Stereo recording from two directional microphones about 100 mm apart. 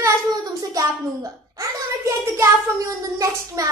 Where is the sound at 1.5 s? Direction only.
30° right (ahead or behind).